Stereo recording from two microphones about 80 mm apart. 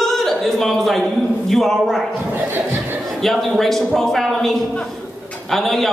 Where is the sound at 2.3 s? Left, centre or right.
Right.